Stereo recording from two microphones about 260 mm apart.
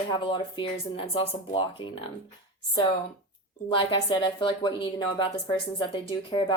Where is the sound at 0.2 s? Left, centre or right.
Centre.